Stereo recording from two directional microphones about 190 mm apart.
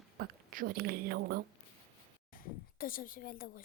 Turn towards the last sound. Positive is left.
turn(degrees=50)  # may be behind; listen again after turning